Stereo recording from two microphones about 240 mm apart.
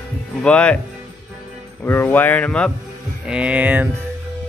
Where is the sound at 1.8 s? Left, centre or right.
Centre.